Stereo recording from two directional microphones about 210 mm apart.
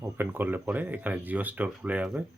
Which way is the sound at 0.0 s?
10° right (ahead or behind).